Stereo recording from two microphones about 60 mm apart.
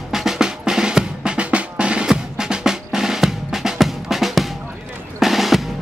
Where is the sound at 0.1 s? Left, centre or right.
Centre.